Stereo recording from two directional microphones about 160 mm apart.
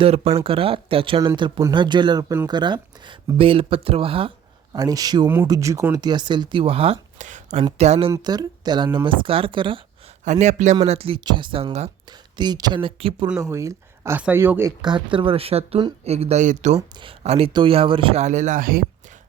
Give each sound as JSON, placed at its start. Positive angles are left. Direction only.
{"t": 0.0, "sound": "speech", "side_deg": -35}
{"t": 4.7, "sound": "speech", "side_deg": -25}
{"t": 8.1, "sound": "speech", "side_deg": -25}
{"t": 10.2, "sound": "a man's voice", "side_deg": -45}
{"t": 10.8, "sound": "speech", "side_deg": -35}
{"t": 12.4, "sound": "speech", "side_deg": -25}
{"t": 13.4, "sound": "speech", "side_deg": -20}
{"t": 14.8, "sound": "speech", "side_deg": -30}
{"t": 16.9, "sound": "speech", "side_deg": -35}